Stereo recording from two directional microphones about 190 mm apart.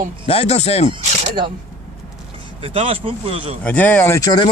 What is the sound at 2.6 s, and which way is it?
Speech, 30° right (ahead or behind).